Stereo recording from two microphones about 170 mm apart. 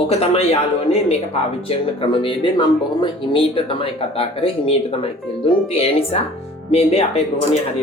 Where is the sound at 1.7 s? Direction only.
30° left (ahead or behind).